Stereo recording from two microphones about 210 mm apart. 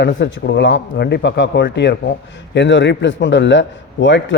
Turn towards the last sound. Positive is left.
turn(degrees=60)  # may be behind; listen again after turning